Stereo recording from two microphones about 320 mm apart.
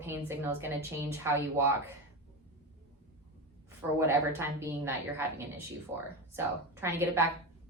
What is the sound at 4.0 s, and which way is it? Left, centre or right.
A woman's voice, centre.